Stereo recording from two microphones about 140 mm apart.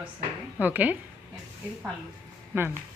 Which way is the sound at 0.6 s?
10° right (ahead or behind).